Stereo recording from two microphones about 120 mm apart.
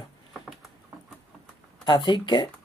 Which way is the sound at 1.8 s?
35° left (ahead or behind).